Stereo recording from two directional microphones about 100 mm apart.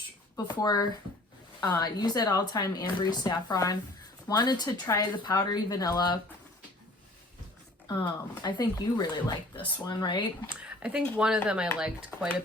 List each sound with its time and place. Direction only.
0.3 s speech: 40° left (ahead or behind)
7.9 s speech: 45° left (ahead or behind)
10.5 s speech: 10° right (ahead or behind)